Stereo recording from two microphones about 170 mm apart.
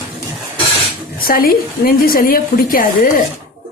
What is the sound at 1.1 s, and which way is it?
A woman's voice, 60° left (ahead or behind).